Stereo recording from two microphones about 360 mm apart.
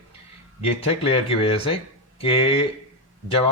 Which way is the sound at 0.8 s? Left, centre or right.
Centre.